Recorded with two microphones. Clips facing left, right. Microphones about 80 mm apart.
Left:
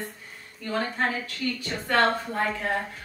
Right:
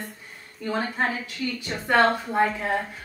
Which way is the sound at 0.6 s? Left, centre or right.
Centre.